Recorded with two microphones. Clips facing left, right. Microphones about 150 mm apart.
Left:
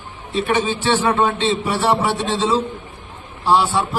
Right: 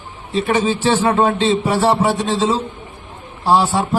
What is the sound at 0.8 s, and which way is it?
A man's voice, 40° right (ahead or behind).